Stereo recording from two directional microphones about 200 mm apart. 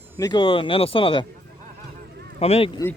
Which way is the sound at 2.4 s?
30° left (ahead or behind).